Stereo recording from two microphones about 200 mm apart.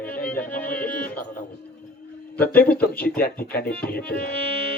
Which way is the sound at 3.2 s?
50° left (ahead or behind).